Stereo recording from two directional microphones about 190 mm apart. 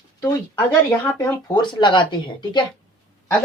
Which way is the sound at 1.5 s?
25° left (ahead or behind).